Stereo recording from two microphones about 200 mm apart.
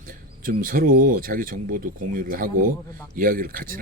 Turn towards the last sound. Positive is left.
turn(degrees=-45)  # may be behind; listen again after turning